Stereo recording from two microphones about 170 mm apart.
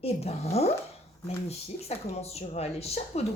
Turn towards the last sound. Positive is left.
turn(degrees=35)  # may be behind; listen again after turning